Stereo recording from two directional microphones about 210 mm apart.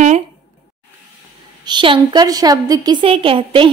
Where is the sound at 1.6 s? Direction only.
20° right (ahead or behind).